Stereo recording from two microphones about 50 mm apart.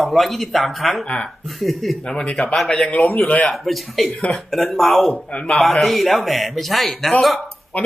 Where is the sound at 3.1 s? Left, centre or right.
Left.